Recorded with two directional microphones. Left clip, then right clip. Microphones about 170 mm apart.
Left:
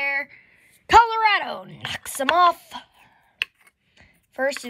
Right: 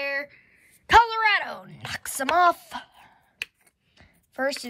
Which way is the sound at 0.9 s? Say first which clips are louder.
Left 3 dB; 15° left (ahead or behind).